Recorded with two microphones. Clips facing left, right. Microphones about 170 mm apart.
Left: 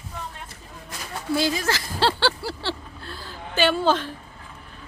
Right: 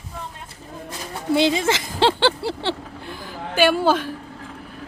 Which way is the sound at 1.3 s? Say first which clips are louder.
Right 5 dB; 25° right (ahead or behind).